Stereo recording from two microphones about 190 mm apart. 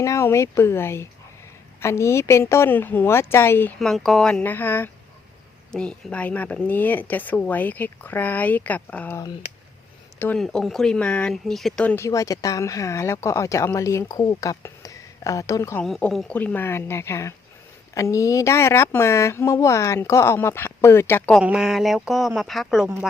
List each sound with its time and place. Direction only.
0.0 s speech: 15° left (ahead or behind)
15.8 s speech: 5° left (ahead or behind)
21.4 s speech: 5° right (ahead or behind)